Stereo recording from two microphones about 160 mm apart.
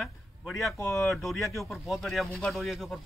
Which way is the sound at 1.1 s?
Centre (ahead or behind).